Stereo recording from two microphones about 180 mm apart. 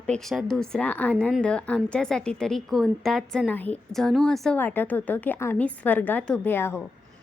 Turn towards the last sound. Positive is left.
turn(degrees=10)  # may be behind; listen again after turning